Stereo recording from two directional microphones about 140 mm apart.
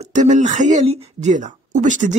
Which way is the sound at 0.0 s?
60° right (ahead or behind).